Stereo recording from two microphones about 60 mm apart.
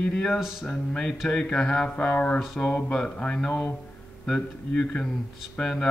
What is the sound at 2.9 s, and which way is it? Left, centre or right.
Speech, centre.